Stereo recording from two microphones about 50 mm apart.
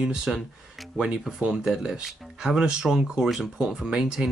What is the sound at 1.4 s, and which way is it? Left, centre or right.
Speech, centre.